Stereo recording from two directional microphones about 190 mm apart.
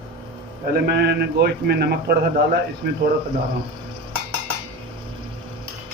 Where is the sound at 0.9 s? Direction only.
60° right (ahead or behind).